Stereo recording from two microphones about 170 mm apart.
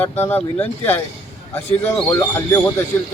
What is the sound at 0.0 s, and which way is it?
Speech, 10° left (ahead or behind).